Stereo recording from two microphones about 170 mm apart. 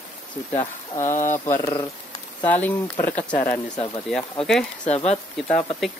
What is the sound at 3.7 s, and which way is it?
Speech, 25° left (ahead or behind).